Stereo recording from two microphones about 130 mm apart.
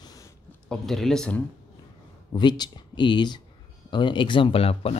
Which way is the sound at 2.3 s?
35° left (ahead or behind).